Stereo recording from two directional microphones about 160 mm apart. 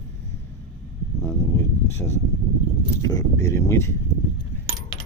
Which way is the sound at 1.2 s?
15° left (ahead or behind).